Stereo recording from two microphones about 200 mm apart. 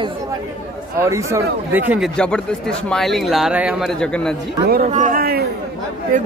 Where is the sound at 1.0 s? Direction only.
15° right (ahead or behind).